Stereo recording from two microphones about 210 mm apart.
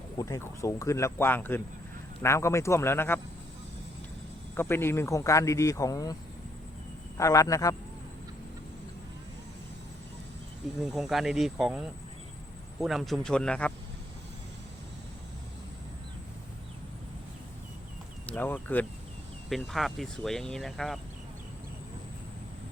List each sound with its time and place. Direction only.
0.2 s a man's voice: 15° left (ahead or behind)
4.5 s a man's voice: 10° left (ahead or behind)
7.2 s a man's voice: 15° left (ahead or behind)
10.8 s speech: centre (ahead or behind)
18.3 s speech: 10° left (ahead or behind)